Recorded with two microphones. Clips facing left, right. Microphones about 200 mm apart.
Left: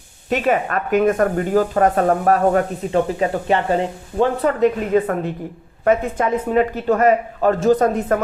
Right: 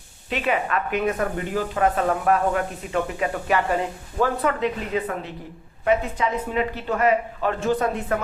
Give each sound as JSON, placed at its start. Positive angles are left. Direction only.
{"t": 0.3, "sound": "speech", "side_deg": 45}
{"t": 4.6, "sound": "speech", "side_deg": 50}